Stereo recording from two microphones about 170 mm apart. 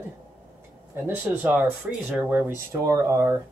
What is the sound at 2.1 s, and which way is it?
Speech, 10° right (ahead or behind).